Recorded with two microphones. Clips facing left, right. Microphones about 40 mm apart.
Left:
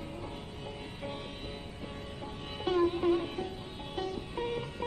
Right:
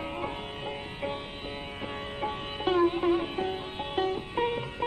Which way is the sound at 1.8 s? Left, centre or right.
Right.